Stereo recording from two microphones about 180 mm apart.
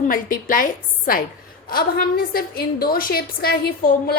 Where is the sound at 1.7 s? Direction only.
55° left (ahead or behind).